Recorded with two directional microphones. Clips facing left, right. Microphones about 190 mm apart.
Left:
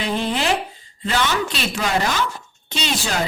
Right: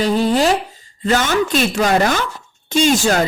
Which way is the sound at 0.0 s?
40° right (ahead or behind).